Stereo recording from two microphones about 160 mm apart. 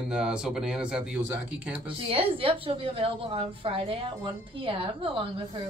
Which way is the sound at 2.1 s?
35° right (ahead or behind).